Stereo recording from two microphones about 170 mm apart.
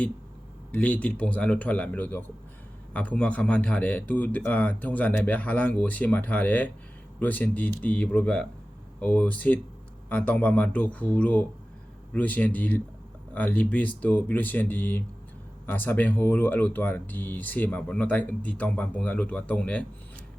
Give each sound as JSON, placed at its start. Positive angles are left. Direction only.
{"t": 0.7, "sound": "speech", "side_deg": 10}